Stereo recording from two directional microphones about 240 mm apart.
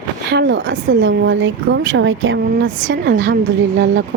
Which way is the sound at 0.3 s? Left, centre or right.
Right.